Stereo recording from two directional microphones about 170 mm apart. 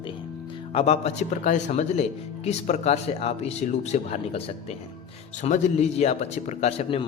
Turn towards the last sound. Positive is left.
turn(degrees=35)  # may be behind; listen again after turning